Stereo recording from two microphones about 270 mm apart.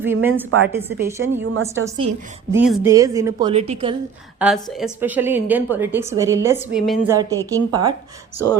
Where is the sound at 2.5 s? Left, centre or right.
Centre.